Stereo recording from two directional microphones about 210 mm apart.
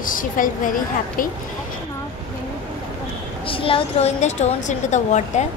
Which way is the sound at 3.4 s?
25° left (ahead or behind).